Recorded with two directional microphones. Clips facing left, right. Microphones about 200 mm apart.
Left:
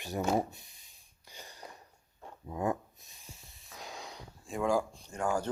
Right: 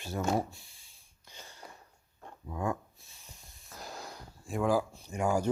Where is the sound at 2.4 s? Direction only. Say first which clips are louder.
Left 1 dB; 20° left (ahead or behind).